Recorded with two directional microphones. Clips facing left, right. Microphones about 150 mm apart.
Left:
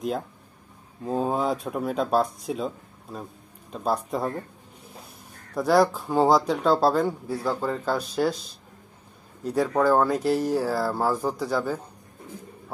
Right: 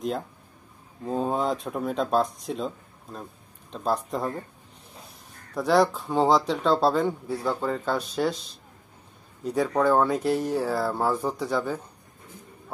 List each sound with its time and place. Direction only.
1.0 s speech: 5° left (ahead or behind)
5.5 s speech: 5° left (ahead or behind)